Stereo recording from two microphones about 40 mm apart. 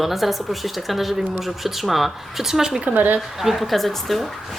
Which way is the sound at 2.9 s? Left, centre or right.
Right.